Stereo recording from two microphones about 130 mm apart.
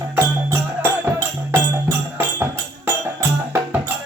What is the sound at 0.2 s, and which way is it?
Music, 20° right (ahead or behind).